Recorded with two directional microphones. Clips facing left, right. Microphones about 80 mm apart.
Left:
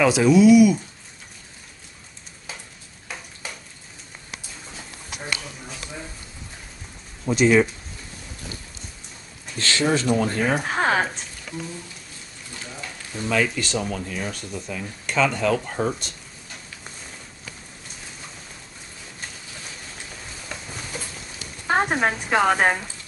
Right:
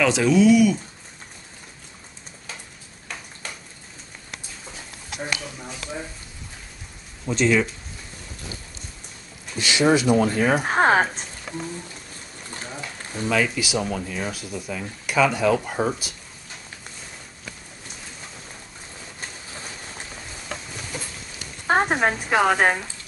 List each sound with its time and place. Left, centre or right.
0.0 s speech: centre
7.2 s speech: centre
9.6 s speech: centre
10.6 s speech: right
13.2 s speech: centre
21.6 s a sound: centre
22.3 s speech: centre